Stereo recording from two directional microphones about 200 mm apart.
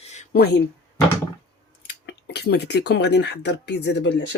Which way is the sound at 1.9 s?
55° left (ahead or behind).